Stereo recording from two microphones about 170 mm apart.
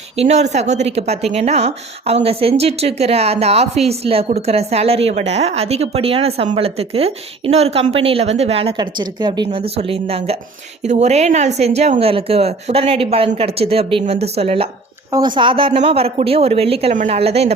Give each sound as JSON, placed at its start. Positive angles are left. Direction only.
{"t": 0.2, "sound": "speech", "side_deg": -40}